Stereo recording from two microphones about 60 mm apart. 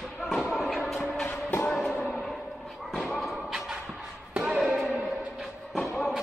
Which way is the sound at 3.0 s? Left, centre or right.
Centre.